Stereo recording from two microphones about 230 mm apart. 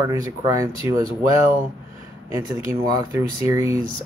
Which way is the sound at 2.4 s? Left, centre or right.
Centre.